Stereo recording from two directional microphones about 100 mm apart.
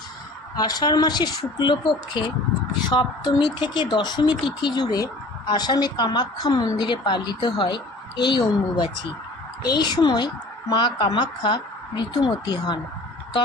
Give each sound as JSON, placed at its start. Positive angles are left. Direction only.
{"t": 0.5, "sound": "speech", "side_deg": 40}